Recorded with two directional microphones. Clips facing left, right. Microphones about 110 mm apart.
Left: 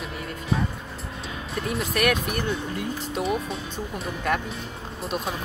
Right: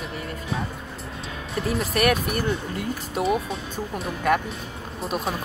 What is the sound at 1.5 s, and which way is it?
Speech, centre (ahead or behind).